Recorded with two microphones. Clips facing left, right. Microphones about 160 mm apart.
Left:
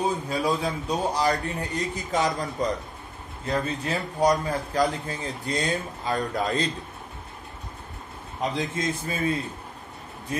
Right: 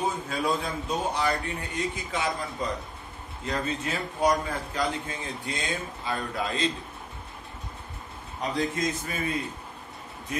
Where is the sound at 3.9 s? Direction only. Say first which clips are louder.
Left 3 dB; 35° left (ahead or behind).